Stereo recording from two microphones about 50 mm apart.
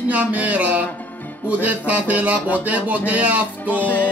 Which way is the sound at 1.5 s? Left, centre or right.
Right.